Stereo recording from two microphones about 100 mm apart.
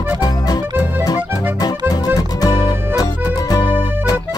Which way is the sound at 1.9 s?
40° left (ahead or behind).